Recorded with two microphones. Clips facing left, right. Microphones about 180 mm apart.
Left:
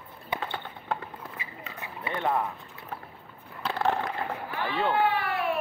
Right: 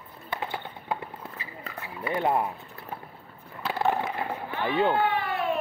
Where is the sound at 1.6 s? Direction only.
35° right (ahead or behind).